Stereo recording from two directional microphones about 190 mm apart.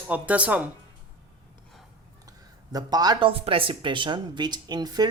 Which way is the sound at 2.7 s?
20° right (ahead or behind).